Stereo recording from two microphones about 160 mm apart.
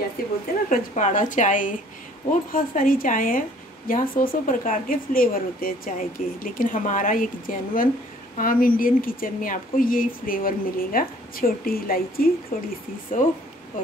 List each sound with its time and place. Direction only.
0.2 s a woman's voice: 70° left (ahead or behind)
0.7 s a woman's voice: 50° left (ahead or behind)